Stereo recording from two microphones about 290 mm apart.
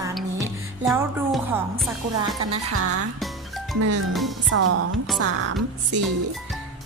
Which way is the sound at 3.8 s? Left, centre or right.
Right.